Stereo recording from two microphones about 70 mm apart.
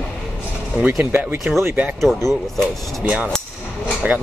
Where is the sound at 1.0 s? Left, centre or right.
Right.